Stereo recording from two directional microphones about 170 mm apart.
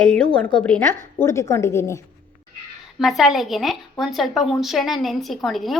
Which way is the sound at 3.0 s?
Centre (ahead or behind).